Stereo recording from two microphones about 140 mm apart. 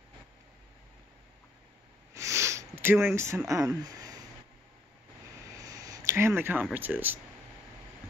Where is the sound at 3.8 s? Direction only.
25° right (ahead or behind).